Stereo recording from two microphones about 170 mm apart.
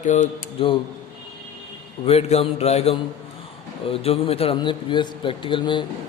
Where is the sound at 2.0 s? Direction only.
35° left (ahead or behind).